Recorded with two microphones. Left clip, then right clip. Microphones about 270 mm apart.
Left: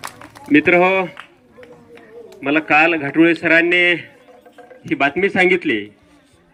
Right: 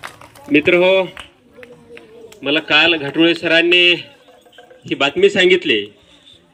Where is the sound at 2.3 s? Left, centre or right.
Centre.